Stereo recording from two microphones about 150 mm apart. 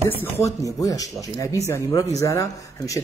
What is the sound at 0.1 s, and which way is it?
Speech, 15° left (ahead or behind).